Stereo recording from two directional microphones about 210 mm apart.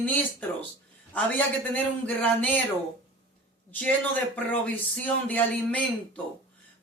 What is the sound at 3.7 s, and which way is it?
Speech, 5° left (ahead or behind).